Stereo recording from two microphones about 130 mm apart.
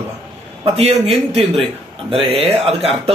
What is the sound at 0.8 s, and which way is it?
A man's voice, 45° right (ahead or behind).